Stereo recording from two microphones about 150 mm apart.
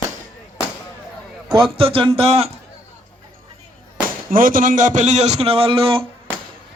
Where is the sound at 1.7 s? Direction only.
35° right (ahead or behind).